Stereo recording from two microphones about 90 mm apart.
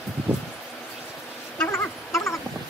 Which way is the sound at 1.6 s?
30° left (ahead or behind).